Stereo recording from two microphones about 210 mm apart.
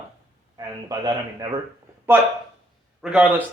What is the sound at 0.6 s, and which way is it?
Speech, 20° right (ahead or behind).